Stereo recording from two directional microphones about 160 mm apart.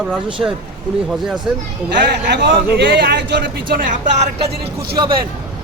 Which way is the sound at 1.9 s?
90° right.